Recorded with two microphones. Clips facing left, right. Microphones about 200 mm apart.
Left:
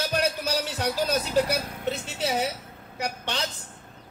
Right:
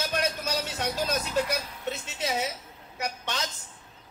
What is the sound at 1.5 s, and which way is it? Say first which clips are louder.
Speech: left 3 dB; 50° left (ahead or behind).